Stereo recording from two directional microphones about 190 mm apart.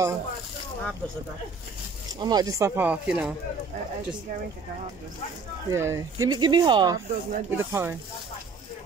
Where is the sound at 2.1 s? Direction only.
20° right (ahead or behind).